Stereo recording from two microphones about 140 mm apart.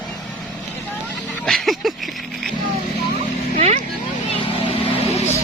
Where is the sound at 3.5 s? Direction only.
55° right (ahead or behind).